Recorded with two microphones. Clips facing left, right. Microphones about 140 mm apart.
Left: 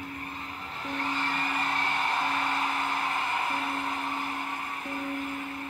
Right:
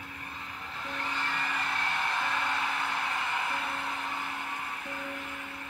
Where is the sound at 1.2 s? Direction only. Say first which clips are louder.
Left 3 dB; 40° left (ahead or behind).